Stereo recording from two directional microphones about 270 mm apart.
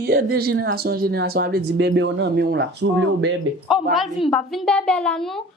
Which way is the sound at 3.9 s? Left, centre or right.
Centre.